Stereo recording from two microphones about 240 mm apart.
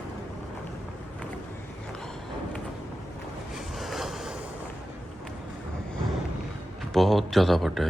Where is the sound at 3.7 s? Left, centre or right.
Centre.